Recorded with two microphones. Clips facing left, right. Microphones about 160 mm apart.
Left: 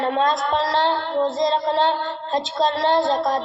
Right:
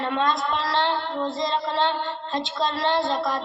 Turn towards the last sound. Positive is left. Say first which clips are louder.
# left 5 dB
turn(degrees=40)  # may be behind; listen again after turning